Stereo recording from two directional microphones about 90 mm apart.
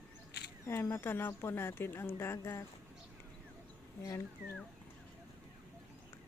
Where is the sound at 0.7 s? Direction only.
30° left (ahead or behind).